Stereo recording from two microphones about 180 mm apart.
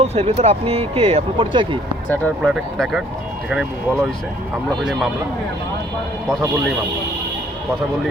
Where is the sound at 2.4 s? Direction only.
5° right (ahead or behind).